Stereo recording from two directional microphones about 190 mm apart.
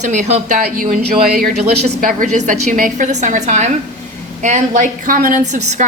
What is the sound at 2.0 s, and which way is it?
A woman's voice, 45° right (ahead or behind).